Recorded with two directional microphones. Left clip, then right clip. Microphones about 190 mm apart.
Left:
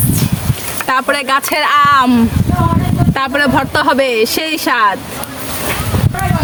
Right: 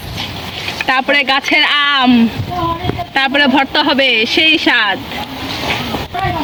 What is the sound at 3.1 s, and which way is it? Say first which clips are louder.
Speech: right 2 dB; 20° left (ahead or behind).